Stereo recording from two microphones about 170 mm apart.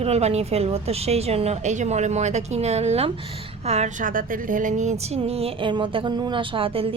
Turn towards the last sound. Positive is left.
turn(degrees=-35)  # may be behind; listen again after turning